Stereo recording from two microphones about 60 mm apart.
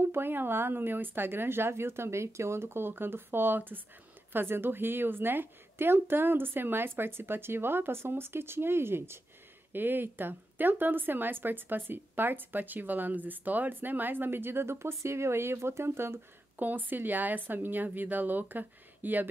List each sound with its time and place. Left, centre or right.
0.0 s a woman's voice: right
16.5 s a woman's voice: right